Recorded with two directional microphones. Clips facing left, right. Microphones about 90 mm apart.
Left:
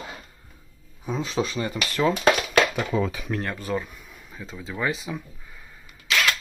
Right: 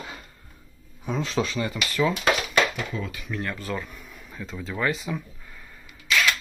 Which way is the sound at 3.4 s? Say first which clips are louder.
Left 1 dB; 30° left (ahead or behind).